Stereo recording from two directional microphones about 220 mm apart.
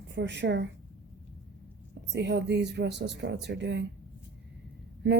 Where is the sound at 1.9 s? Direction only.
50° right (ahead or behind).